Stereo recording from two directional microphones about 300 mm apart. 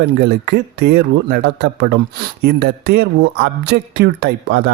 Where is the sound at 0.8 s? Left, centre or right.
Right.